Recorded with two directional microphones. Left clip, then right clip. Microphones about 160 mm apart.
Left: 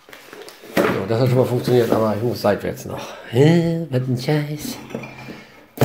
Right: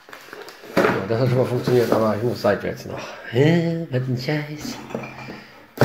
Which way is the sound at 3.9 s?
50° left (ahead or behind).